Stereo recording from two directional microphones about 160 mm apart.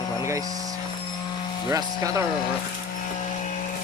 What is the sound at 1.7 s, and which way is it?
Speech, 20° right (ahead or behind).